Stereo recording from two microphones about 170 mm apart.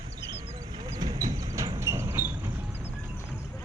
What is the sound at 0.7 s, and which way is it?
Vehicle, 25° right (ahead or behind).